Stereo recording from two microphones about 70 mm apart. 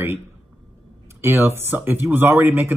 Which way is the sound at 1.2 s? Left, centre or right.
Right.